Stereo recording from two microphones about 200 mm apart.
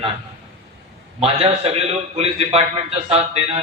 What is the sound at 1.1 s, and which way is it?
A man's voice, 30° right (ahead or behind).